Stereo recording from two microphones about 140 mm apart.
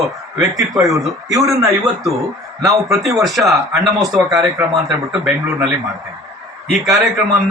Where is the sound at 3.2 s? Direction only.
Centre (ahead or behind).